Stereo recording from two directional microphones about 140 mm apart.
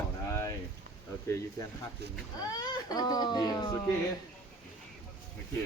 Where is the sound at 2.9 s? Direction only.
25° left (ahead or behind).